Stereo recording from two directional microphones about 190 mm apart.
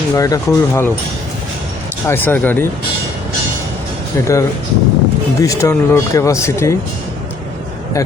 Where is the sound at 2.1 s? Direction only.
10° left (ahead or behind).